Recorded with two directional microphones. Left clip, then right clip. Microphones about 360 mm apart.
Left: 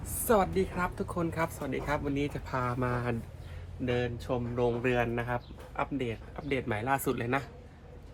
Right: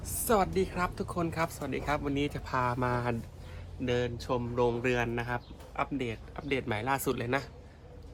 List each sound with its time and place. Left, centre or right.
0.0 s speech: centre